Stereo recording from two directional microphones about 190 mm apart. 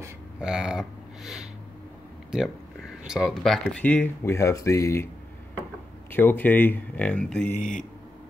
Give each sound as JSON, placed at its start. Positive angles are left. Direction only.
{"t": 0.4, "sound": "speech", "side_deg": -5}
{"t": 6.1, "sound": "speech", "side_deg": 10}
{"t": 7.5, "sound": "speech", "side_deg": 45}